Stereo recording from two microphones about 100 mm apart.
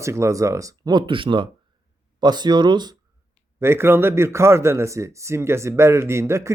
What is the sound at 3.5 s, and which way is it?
A man's voice, 25° right (ahead or behind).